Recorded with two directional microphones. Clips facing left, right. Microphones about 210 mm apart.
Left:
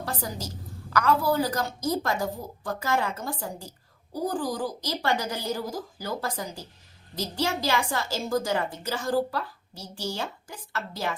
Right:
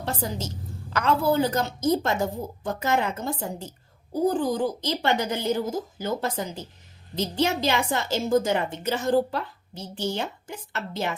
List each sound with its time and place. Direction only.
0.0 s a woman's voice: 25° right (ahead or behind)